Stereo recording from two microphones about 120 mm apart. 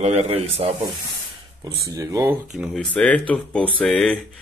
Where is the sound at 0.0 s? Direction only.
65° right (ahead or behind).